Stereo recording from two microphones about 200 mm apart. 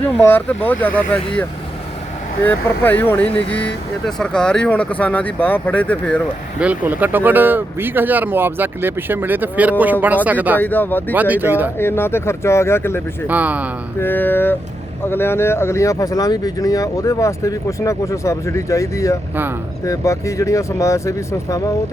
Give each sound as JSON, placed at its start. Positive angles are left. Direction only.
{"t": 0.0, "sound": "speech", "side_deg": 10}
{"t": 6.6, "sound": "speech", "side_deg": -10}
{"t": 10.6, "sound": "speech", "side_deg": 10}
{"t": 11.1, "sound": "speech", "side_deg": -10}
{"t": 11.8, "sound": "speech", "side_deg": 10}
{"t": 13.2, "sound": "speech", "side_deg": -10}
{"t": 14.0, "sound": "speech", "side_deg": 10}